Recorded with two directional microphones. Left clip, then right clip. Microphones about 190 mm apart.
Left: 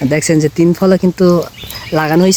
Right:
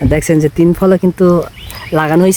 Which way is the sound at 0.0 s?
5° right (ahead or behind).